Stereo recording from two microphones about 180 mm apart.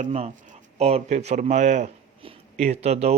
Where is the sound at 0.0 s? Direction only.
40° right (ahead or behind).